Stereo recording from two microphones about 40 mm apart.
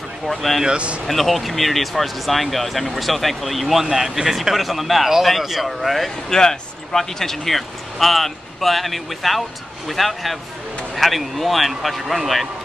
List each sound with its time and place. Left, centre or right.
0.3 s speech: centre
0.7 s speech: right
1.0 s speech: centre
6.3 s speech: centre